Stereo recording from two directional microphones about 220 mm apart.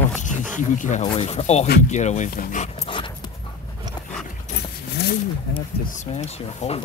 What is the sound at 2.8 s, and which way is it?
Dog, 20° left (ahead or behind).